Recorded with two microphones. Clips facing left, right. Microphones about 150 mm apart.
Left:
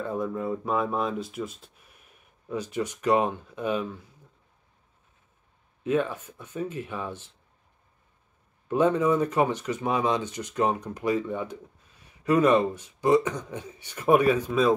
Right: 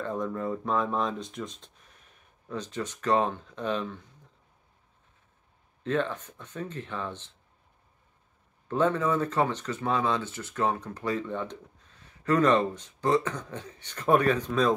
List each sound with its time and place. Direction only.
0.0 s speech: 10° left (ahead or behind)
5.9 s speech: 10° left (ahead or behind)
8.6 s speech: 15° left (ahead or behind)